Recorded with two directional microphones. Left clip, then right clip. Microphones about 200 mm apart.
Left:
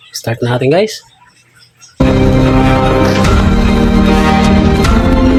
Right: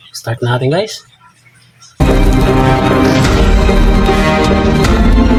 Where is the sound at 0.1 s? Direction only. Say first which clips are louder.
Left 1 dB; 20° left (ahead or behind).